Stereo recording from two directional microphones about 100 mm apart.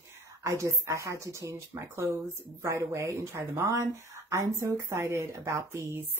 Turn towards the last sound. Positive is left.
turn(degrees=-30)  # may be behind; listen again after turning